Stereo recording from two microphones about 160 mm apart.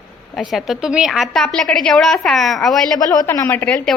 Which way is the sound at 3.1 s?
20° left (ahead or behind).